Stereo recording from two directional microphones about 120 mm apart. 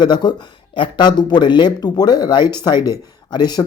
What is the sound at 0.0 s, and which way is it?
Speech, 35° left (ahead or behind).